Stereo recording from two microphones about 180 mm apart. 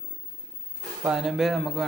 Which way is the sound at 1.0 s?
Centre (ahead or behind).